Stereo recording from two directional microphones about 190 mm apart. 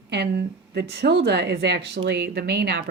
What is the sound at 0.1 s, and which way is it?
Speech, 60° right (ahead or behind).